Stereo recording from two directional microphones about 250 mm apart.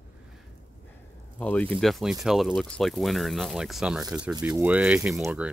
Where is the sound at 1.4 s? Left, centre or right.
Centre.